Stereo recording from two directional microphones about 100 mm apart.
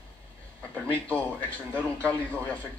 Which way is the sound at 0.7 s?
20° right (ahead or behind).